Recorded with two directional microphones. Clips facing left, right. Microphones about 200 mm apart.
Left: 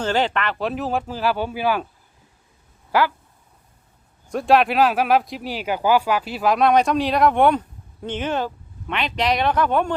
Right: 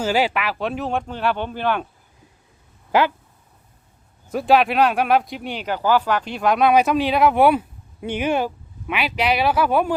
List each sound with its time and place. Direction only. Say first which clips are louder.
0.0 s speech: right 1 dB; 10° right (ahead or behind)
2.9 s speech: right 2 dB; 20° right (ahead or behind)
4.3 s speech: even; centre (ahead or behind)